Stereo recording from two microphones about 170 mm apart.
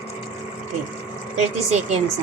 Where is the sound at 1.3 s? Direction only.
40° right (ahead or behind).